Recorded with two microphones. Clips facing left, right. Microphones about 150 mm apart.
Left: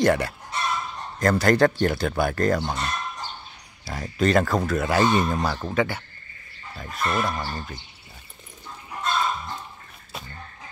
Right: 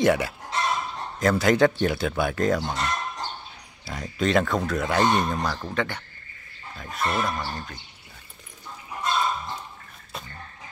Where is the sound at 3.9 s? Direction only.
Centre (ahead or behind).